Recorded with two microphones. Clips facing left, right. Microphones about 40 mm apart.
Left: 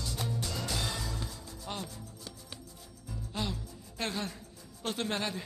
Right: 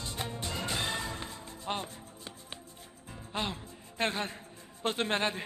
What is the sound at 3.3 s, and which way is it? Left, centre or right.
Music, right.